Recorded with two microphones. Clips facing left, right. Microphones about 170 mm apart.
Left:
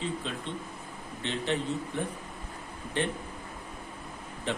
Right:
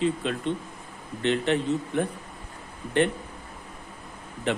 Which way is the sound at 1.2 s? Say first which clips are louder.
Right 7 dB; 65° right (ahead or behind).